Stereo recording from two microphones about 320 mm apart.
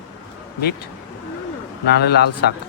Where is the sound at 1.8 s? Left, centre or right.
Left.